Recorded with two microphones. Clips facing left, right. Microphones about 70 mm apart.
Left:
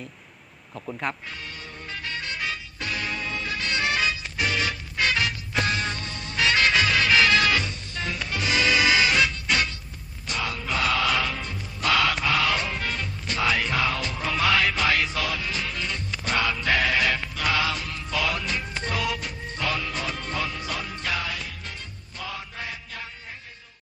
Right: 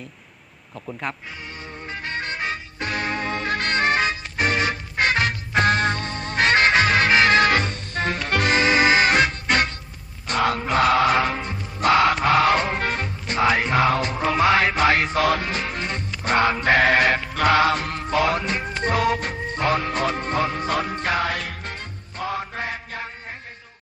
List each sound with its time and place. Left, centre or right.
0.9 s speech: centre
1.9 s music: right
8.5 s music: right